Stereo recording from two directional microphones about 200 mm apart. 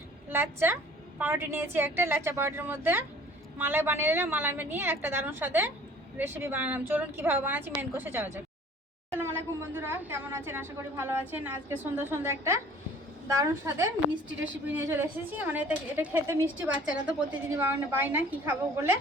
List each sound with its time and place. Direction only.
0.3 s a woman's voice: 10° right (ahead or behind)